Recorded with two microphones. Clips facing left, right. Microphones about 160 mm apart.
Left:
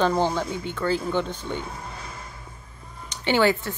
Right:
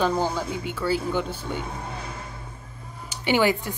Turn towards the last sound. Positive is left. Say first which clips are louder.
# left 1 dB
turn(degrees=-15)  # may be behind; listen again after turning